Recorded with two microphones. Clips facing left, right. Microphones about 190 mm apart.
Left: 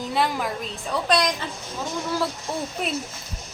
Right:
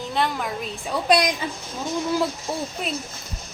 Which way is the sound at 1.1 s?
10° right (ahead or behind).